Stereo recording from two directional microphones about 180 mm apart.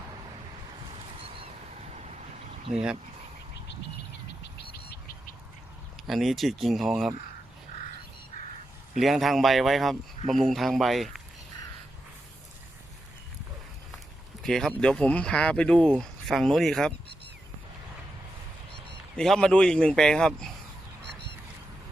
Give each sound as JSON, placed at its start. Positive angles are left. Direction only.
{"t": 0.9, "sound": "a sound", "side_deg": -30}
{"t": 4.7, "sound": "bird", "side_deg": 60}
{"t": 6.1, "sound": "speech", "side_deg": 0}
{"t": 9.0, "sound": "speech", "side_deg": 0}
{"t": 14.4, "sound": "speech", "side_deg": 0}
{"t": 19.1, "sound": "speech", "side_deg": 5}